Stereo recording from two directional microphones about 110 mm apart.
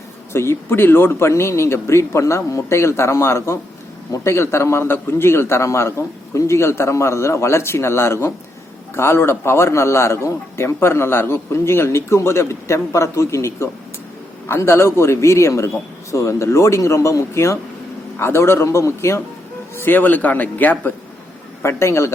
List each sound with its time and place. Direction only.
0.3 s a man's voice: 20° left (ahead or behind)